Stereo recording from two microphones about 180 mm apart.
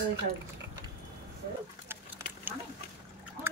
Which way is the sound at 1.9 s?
10° right (ahead or behind).